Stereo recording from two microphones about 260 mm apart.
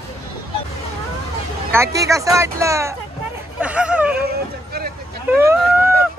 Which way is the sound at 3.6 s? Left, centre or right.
Centre.